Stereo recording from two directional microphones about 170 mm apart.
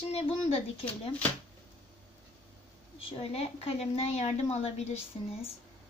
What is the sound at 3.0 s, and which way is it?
A woman's voice, 35° left (ahead or behind).